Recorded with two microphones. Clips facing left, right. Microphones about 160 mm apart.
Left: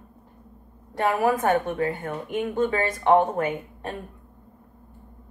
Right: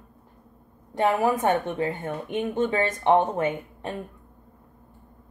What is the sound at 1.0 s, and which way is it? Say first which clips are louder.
Speech: even; 20° right (ahead or behind).